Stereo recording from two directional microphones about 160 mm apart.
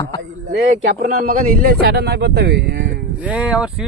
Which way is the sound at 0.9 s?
65° right (ahead or behind).